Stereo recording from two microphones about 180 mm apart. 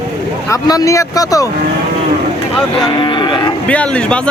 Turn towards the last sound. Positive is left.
turn(degrees=5)  # may be behind; listen again after turning